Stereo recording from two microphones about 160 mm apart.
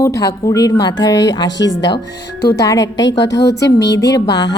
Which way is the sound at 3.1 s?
90° left.